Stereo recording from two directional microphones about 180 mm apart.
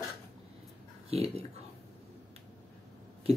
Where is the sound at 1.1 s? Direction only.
35° right (ahead or behind).